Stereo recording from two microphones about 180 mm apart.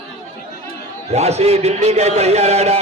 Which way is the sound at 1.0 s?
35° right (ahead or behind).